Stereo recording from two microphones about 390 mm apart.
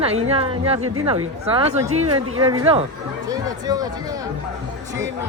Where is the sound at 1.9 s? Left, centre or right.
Right.